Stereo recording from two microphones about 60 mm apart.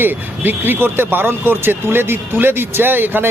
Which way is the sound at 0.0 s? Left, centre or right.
Right.